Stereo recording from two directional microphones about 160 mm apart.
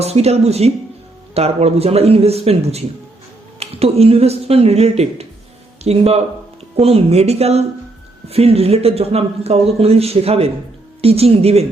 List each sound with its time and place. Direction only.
0.0 s speech: 40° right (ahead or behind)